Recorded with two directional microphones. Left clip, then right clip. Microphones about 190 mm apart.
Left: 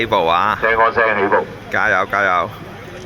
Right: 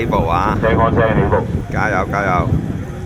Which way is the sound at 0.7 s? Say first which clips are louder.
Left 2 dB; 5° left (ahead or behind).